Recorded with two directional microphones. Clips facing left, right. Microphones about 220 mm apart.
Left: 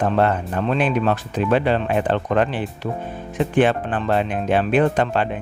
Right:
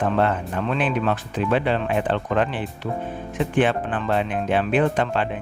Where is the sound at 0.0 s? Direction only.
40° left (ahead or behind).